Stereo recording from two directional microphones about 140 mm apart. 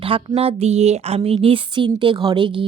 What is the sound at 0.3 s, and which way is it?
Speech, 45° right (ahead or behind).